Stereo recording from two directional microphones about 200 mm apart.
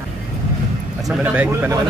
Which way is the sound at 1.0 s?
5° right (ahead or behind).